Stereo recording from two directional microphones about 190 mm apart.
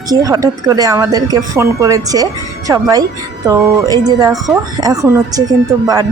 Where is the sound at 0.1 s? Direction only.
20° right (ahead or behind).